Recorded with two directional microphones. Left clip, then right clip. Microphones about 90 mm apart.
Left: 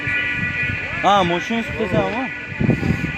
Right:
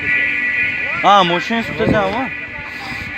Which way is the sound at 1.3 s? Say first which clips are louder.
Right 4 dB; centre (ahead or behind).